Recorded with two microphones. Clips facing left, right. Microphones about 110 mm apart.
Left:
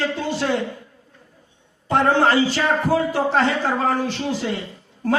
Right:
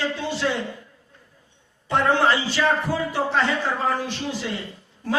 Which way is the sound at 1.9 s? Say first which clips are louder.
Left 3 dB; 45° left (ahead or behind).